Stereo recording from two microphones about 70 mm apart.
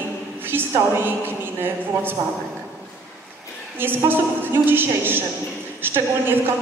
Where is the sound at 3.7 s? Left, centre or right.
Right.